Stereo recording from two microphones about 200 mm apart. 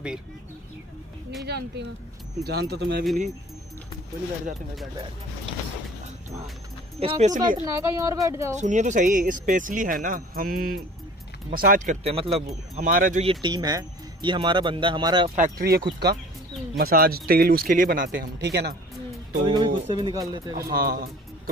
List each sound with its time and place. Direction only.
1.4 s speech: 55° right (ahead or behind)
7.0 s speech: 30° right (ahead or behind)
7.6 s speech: 15° right (ahead or behind)
8.5 s speech: 35° right (ahead or behind)
12.7 s speech: 45° right (ahead or behind)
13.2 s speech: 25° right (ahead or behind)
15.3 s speech: 45° right (ahead or behind)
19.4 s speech: 20° right (ahead or behind)
20.5 s speech: 50° right (ahead or behind)